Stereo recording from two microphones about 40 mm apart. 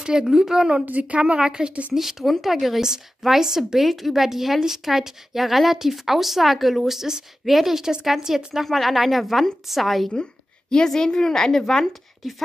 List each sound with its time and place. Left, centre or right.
0.0 s a woman's voice: centre
0.8 s a woman's voice: right
1.2 s a woman's voice: right
2.0 s a woman's voice: centre
8.6 s a woman's voice: centre
10.7 s a woman's voice: centre